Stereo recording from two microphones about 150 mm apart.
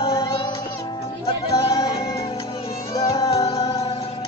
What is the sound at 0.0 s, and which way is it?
Music, 40° left (ahead or behind).